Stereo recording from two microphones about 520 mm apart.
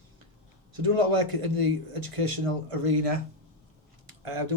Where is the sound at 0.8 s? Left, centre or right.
Right.